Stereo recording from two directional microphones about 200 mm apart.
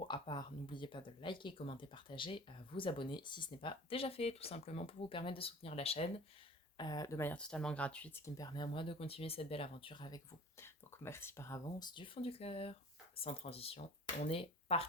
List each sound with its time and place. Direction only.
0.0 s speech: 25° left (ahead or behind)
6.7 s speech: 20° left (ahead or behind)
10.6 s speech: 10° left (ahead or behind); by 14.8 s 30° left (ahead or behind)